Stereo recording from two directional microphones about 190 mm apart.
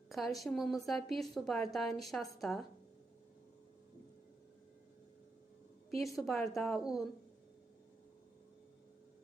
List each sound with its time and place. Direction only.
0.1 s a woman's voice: centre (ahead or behind)
6.0 s a woman's voice: centre (ahead or behind)